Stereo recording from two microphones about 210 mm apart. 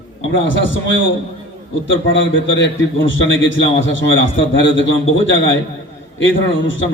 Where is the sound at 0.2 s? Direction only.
65° left (ahead or behind).